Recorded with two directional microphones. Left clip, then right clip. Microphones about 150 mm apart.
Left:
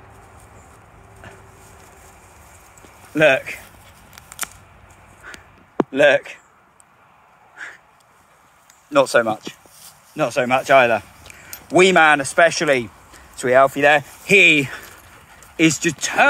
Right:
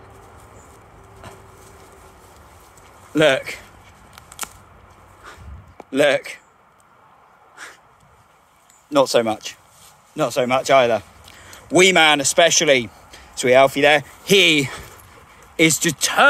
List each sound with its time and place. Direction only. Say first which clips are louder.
1.2 s a sound: right 1 dB; 20° right (ahead or behind)
3.1 s speech: left 1 dB; 30° right (ahead or behind)
4.1 s scissors: left 2 dB; 30° left (ahead or behind)
5.9 s speech: left 2 dB; 30° right (ahead or behind)
7.5 s crow: left 4 dB; 25° right (ahead or behind)
8.9 s speech: left 1 dB; 30° right (ahead or behind)
10.1 s speech: left 1 dB; 5° right (ahead or behind)
11.7 s speech: left 1 dB; 30° right (ahead or behind)
14.2 s speech: left 3 dB; 40° right (ahead or behind)